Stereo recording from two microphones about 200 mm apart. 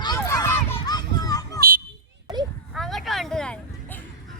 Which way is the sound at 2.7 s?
Centre (ahead or behind).